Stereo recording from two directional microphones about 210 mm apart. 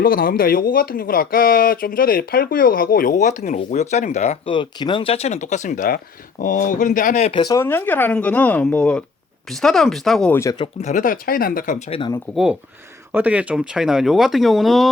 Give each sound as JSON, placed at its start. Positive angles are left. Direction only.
{"t": 0.0, "sound": "speech", "side_deg": 45}
{"t": 7.4, "sound": "speech", "side_deg": 15}
{"t": 10.6, "sound": "speech", "side_deg": 35}
{"t": 13.1, "sound": "speech", "side_deg": -5}